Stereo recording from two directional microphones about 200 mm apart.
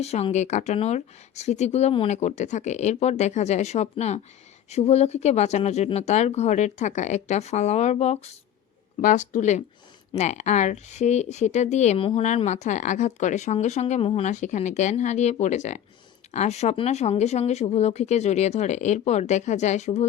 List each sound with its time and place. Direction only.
0.0 s speech: 30° left (ahead or behind)